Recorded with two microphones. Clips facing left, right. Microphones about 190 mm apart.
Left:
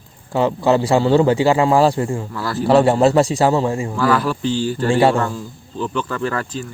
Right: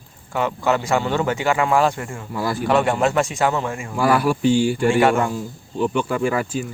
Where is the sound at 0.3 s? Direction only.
30° left (ahead or behind).